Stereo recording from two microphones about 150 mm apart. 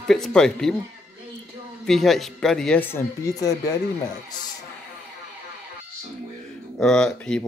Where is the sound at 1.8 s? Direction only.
Centre (ahead or behind); by 3.5 s 20° left (ahead or behind).